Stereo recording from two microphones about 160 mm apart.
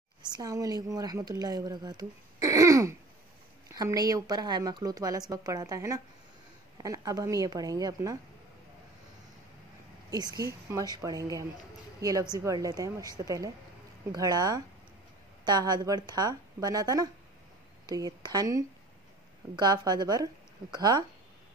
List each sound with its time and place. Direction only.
0.3 s speech: 20° right (ahead or behind)
2.4 s throat clearing: 20° right (ahead or behind)
3.7 s speech: 25° right (ahead or behind)
10.1 s speech: 25° right (ahead or behind)